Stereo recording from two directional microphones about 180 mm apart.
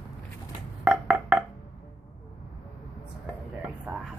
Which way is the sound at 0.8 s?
5° right (ahead or behind).